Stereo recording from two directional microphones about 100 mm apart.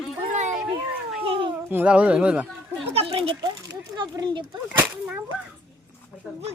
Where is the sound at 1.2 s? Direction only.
60° right (ahead or behind).